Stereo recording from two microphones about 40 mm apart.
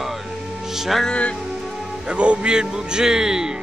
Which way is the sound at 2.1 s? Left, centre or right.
Right.